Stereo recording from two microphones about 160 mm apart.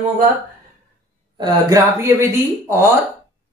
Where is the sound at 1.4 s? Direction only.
20° right (ahead or behind).